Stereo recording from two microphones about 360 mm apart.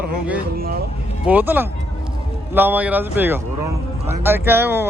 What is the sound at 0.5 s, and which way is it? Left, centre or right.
Speech, right.